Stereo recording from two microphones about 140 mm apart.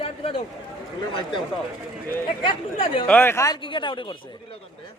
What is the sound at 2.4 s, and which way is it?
Speech, 40° left (ahead or behind).